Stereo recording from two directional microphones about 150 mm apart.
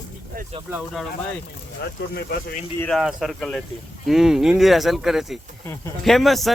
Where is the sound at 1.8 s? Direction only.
90° left.